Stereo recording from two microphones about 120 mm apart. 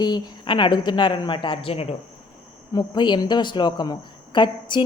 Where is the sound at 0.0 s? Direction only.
40° left (ahead or behind); by 2.0 s 55° left (ahead or behind).